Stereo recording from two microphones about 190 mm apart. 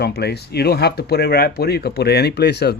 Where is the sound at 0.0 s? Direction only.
60° left (ahead or behind).